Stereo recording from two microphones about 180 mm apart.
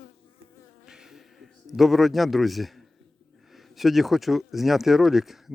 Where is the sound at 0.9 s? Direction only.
Centre (ahead or behind).